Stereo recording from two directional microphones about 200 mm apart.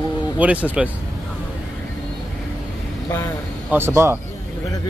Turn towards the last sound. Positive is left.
turn(degrees=-15)  # may be behind; listen again after turning